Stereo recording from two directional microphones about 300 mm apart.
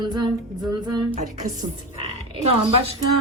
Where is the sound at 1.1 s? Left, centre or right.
Right.